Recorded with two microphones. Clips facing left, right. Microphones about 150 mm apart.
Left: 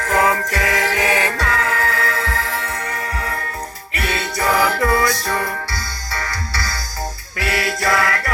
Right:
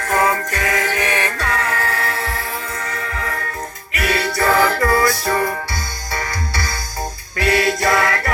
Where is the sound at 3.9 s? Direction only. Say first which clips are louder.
Right 3 dB; 25° left (ahead or behind).